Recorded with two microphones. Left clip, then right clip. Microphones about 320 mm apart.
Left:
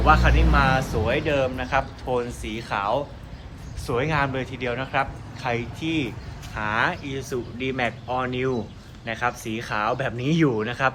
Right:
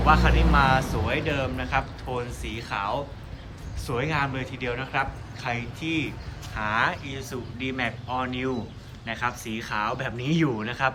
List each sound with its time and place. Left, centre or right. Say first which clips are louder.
0.0 s a man's voice: left 2 dB; centre